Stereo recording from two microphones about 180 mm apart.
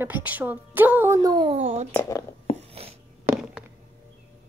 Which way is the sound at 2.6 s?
35° right (ahead or behind).